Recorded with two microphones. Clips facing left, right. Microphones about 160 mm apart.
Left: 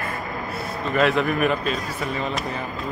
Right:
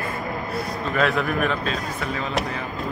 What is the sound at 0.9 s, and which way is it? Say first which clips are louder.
Speech: left 2 dB; centre (ahead or behind).